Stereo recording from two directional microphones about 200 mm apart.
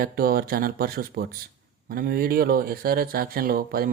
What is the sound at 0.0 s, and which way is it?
Speech, 50° right (ahead or behind).